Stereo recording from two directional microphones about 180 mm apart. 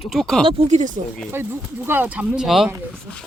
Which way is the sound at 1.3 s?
10° right (ahead or behind).